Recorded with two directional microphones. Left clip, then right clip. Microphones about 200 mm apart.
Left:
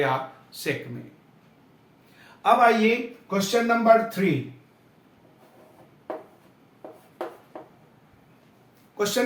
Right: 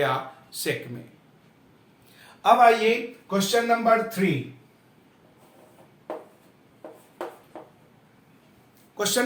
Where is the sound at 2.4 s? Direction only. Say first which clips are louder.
Right 1 dB; 30° right (ahead or behind).